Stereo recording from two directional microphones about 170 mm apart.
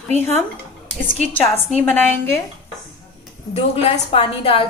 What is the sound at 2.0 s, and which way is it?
Speech, 15° left (ahead or behind).